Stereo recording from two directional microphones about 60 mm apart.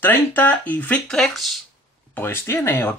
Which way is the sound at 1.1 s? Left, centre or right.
Centre.